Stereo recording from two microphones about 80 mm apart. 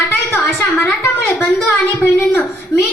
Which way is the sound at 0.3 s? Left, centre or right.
Left.